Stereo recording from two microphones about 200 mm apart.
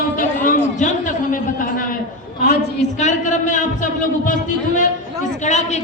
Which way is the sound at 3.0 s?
40° left (ahead or behind).